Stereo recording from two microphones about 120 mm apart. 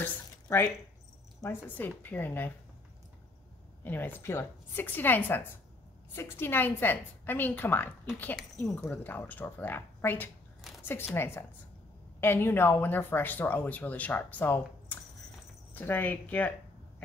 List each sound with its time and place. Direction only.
0.0 s a sound: 20° left (ahead or behind)
1.4 s speech: 15° left (ahead or behind)
3.8 s a woman's voice: 15° left (ahead or behind)